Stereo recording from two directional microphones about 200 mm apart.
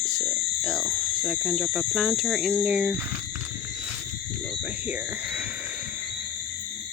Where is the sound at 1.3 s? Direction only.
Centre (ahead or behind).